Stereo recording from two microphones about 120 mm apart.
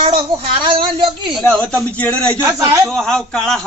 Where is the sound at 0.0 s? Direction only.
50° right (ahead or behind).